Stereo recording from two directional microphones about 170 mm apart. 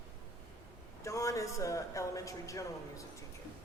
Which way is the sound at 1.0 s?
20° left (ahead or behind).